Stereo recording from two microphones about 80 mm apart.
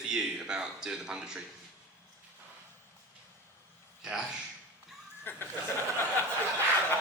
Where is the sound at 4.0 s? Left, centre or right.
Centre.